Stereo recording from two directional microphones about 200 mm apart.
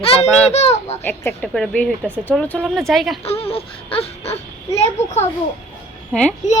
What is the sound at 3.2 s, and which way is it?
Baby cry, 30° left (ahead or behind).